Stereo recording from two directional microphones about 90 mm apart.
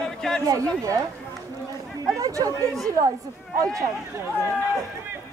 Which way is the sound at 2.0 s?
40° right (ahead or behind).